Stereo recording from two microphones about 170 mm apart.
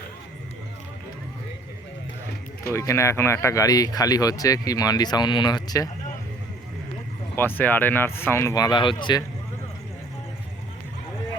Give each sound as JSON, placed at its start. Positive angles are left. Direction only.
{"t": 2.7, "sound": "speech", "side_deg": 15}
{"t": 7.3, "sound": "speech", "side_deg": 10}